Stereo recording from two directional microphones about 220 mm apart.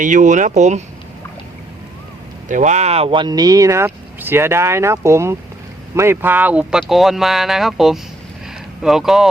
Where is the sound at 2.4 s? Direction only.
35° right (ahead or behind).